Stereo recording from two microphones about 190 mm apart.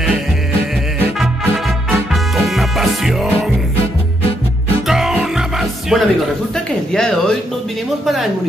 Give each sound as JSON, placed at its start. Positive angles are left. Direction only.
{"t": 2.3, "sound": "music", "side_deg": 0}
{"t": 4.8, "sound": "music", "side_deg": 0}
{"t": 6.5, "sound": "a sound", "side_deg": 5}
{"t": 8.0, "sound": "a man's voice", "side_deg": 0}